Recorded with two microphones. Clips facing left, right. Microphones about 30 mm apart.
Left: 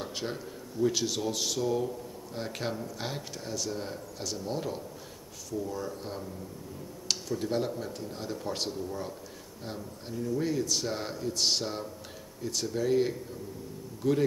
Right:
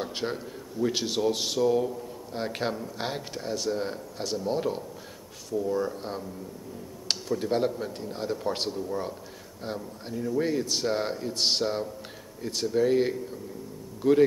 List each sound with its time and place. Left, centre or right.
0.0 s a sound: centre
0.9 s speech: right
1.6 s speech: centre